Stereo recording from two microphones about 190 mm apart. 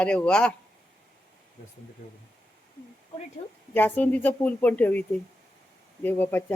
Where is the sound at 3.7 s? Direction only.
10° left (ahead or behind).